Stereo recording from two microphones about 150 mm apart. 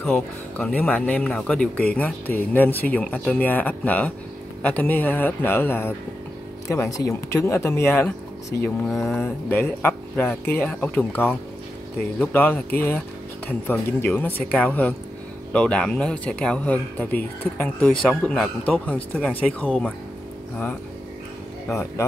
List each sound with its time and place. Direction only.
0.0 s speech: 5° left (ahead or behind)
21.6 s speech: 20° left (ahead or behind)